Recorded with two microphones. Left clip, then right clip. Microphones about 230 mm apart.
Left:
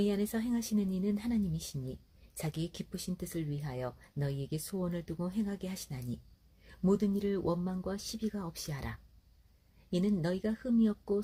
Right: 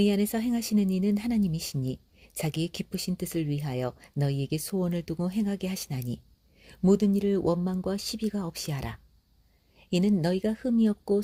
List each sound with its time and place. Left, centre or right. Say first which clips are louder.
0.0 s speech: right 7 dB; right